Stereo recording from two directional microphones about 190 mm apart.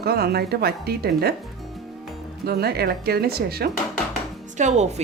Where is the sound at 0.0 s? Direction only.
55° right (ahead or behind).